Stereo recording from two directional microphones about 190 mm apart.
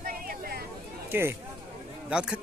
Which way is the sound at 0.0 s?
50° right (ahead or behind).